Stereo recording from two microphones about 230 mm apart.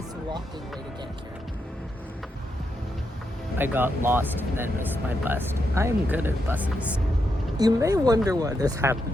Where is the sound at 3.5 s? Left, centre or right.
Centre.